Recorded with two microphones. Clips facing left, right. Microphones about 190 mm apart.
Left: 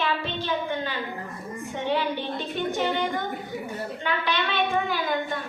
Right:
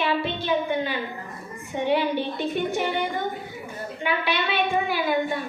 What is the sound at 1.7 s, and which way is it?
Female singing, 15° right (ahead or behind).